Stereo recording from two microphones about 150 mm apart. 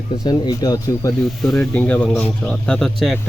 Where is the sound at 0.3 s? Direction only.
25° left (ahead or behind).